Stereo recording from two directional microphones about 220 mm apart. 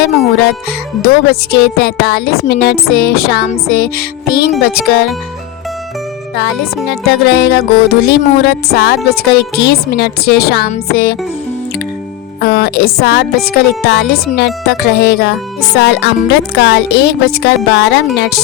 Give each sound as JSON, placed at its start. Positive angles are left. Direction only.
{"t": 1.0, "sound": "speech", "side_deg": 45}
{"t": 6.8, "sound": "speech", "side_deg": 50}
{"t": 12.4, "sound": "speech", "side_deg": 45}